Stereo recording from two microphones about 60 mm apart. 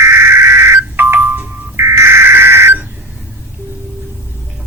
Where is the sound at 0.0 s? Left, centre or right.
Right.